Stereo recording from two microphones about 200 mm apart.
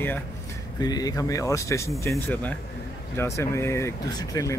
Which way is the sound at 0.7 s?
20° left (ahead or behind).